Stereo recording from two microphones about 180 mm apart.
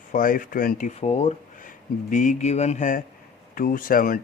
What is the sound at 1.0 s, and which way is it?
Speech, 35° left (ahead or behind).